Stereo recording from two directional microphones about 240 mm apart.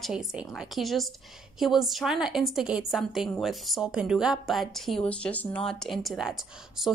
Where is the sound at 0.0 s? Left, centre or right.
Centre.